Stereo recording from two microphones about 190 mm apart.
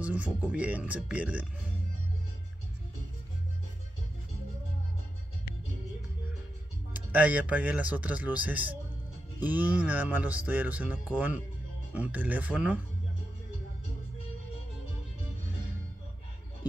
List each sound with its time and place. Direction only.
0.0 s speech: 5° right (ahead or behind)
6.9 s speech: 10° right (ahead or behind)